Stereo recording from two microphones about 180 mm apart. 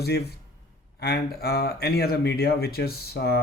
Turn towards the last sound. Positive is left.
turn(degrees=60)  # may be behind; listen again after turning